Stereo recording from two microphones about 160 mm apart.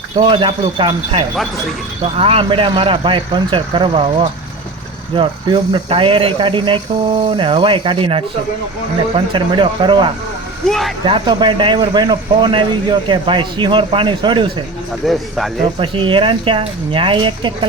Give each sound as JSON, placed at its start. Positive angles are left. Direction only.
{"t": 0.2, "sound": "speech", "side_deg": -30}
{"t": 10.7, "sound": "speech", "side_deg": 0}
{"t": 11.0, "sound": "speech", "side_deg": -30}
{"t": 15.0, "sound": "speech", "side_deg": 0}
{"t": 15.8, "sound": "speech", "side_deg": -30}